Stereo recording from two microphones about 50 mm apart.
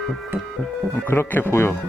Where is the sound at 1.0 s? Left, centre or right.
Left.